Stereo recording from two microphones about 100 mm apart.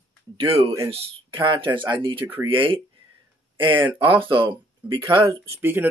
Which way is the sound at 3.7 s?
20° right (ahead or behind).